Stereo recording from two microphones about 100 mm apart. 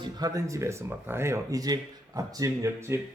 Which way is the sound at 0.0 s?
40° right (ahead or behind).